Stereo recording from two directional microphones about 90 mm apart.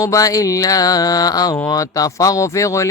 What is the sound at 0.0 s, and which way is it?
Speech, 40° left (ahead or behind).